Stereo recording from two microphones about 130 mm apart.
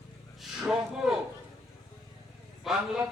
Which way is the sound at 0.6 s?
5° right (ahead or behind).